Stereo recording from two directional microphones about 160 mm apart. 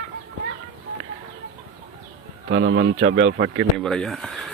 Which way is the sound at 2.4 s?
90° right.